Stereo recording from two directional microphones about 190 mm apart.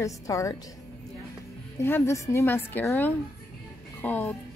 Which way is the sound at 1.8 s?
10° left (ahead or behind).